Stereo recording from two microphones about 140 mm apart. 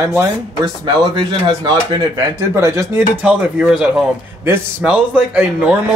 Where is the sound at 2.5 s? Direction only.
20° right (ahead or behind).